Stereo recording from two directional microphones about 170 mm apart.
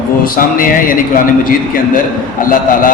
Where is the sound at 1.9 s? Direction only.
55° left (ahead or behind).